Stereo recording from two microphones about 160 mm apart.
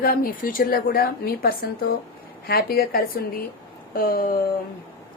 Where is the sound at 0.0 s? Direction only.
65° left (ahead or behind).